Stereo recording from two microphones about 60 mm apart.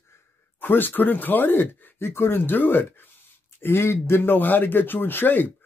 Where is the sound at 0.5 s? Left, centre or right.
Left.